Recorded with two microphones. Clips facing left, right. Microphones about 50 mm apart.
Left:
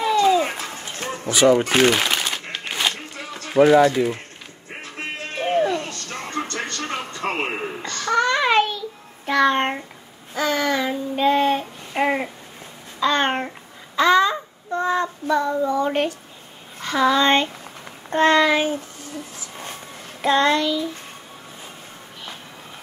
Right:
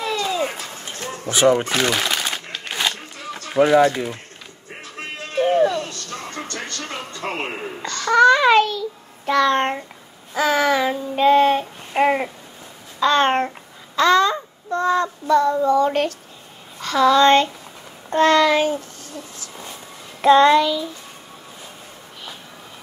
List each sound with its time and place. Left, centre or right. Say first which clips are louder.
0.0 s a sound: left 5 dB; left
1.3 s speech: even; right
1.7 s a child's voice: left 3 dB; left
3.6 s a child's voice: left 2 dB; left
4.8 s music: left 1 dB; left
8.1 s child singing: right 6 dB; centre
10.3 s child singing: right 3 dB; centre
13.0 s child singing: right 3 dB; centre
16.8 s a child's voice: right 4 dB; centre
20.2 s child singing: right 6 dB; centre